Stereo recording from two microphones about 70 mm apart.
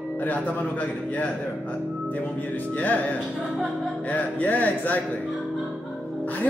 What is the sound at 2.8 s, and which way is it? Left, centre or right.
Speech, left.